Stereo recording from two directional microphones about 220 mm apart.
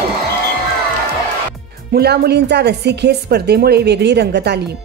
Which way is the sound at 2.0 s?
45° right (ahead or behind).